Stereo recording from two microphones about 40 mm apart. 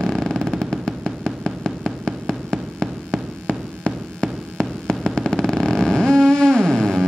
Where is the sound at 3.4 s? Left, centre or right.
Centre.